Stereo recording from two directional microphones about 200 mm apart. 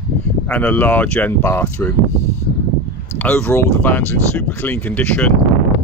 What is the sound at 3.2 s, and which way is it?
Speech, 10° left (ahead or behind).